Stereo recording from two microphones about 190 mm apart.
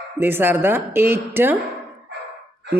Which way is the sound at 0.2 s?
10° right (ahead or behind).